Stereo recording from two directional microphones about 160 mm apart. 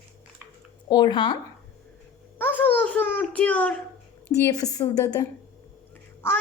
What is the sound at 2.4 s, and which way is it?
A child's voice, 10° left (ahead or behind).